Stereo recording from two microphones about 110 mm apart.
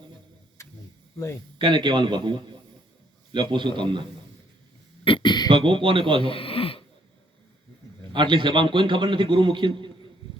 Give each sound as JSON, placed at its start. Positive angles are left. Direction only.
{"t": 0.6, "sound": "a sound", "side_deg": 25}
{"t": 1.5, "sound": "a man's voice", "side_deg": -45}
{"t": 5.0, "sound": "throat clearing", "side_deg": 50}
{"t": 5.5, "sound": "a man's voice", "side_deg": -50}
{"t": 6.2, "sound": "a sound", "side_deg": 55}
{"t": 8.1, "sound": "a man's voice", "side_deg": -45}